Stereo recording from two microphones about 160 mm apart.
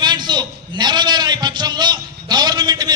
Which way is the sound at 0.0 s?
30° right (ahead or behind).